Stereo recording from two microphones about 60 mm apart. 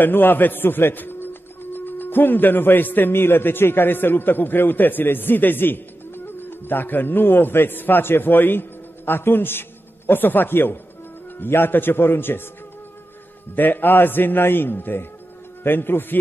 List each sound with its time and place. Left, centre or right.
0.0 s a man's voice: left
13.6 s a man's voice: left